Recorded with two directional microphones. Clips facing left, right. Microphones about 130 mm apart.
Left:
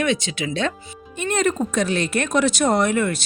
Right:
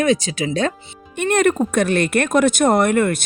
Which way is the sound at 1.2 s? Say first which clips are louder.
Right 5 dB; 60° right (ahead or behind).